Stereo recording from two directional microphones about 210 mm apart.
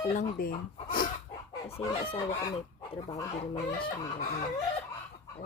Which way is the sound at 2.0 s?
25° left (ahead or behind).